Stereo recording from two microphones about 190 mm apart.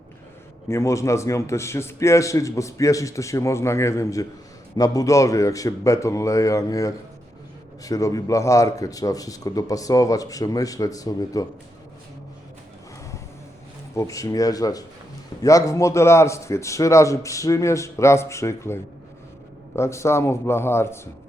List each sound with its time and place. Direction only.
0.7 s a man's voice: 15° left (ahead or behind)
13.9 s a man's voice: 15° left (ahead or behind)